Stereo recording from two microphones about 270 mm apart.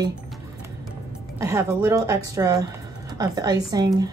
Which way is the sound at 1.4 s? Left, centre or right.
Centre.